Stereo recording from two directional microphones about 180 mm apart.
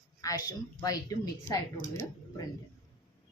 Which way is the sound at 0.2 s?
20° left (ahead or behind).